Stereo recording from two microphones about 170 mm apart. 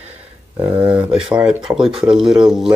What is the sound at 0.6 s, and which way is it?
Speech, 30° right (ahead or behind).